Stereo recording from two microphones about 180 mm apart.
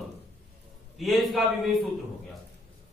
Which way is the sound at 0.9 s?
Centre (ahead or behind).